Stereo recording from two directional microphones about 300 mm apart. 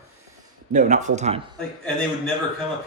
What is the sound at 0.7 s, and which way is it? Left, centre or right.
Speech, right.